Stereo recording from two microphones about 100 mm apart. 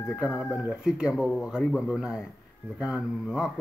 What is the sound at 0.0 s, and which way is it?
Speech, 25° left (ahead or behind).